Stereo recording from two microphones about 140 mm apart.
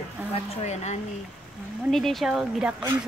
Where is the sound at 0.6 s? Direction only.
55° left (ahead or behind).